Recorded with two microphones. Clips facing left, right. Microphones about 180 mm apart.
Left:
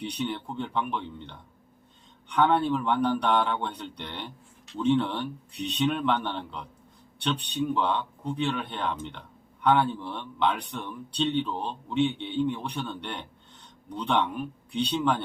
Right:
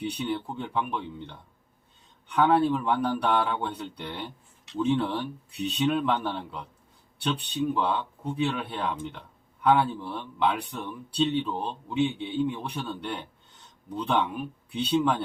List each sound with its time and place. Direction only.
0.0 s speech: 5° right (ahead or behind)